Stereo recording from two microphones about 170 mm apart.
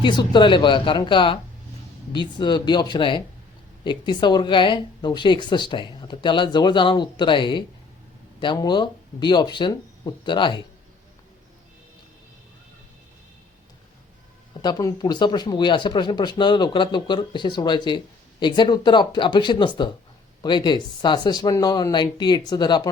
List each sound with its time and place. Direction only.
0.0 s speech: 25° left (ahead or behind)
14.6 s speech: 20° left (ahead or behind)